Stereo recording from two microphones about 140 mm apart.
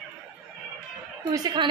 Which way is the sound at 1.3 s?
30° right (ahead or behind).